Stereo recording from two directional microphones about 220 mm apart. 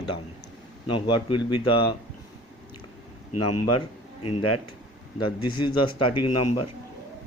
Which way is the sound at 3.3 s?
90° left.